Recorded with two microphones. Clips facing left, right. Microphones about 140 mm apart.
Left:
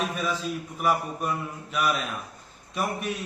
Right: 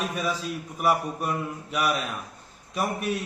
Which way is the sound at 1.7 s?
10° right (ahead or behind).